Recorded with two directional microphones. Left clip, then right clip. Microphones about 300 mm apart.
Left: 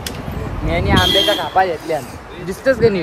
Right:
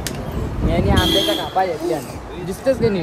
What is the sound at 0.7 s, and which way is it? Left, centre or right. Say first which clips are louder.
Speech: left 3 dB; left.